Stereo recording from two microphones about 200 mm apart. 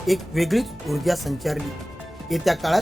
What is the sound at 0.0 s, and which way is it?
Speech, centre (ahead or behind).